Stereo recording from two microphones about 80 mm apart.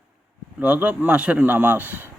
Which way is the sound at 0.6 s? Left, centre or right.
Centre.